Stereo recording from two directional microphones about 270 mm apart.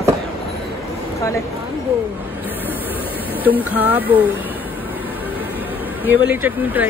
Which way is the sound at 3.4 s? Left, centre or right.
Centre.